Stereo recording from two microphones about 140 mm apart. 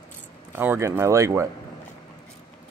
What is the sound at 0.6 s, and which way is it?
Speech, 15° right (ahead or behind).